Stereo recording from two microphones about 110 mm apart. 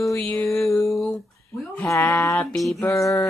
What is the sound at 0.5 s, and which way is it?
Female singing, 25° left (ahead or behind).